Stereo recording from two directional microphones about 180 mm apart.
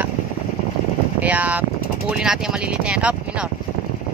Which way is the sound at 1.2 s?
10° right (ahead or behind).